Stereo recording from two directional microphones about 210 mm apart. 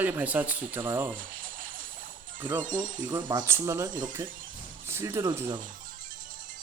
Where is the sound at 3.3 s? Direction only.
15° right (ahead or behind).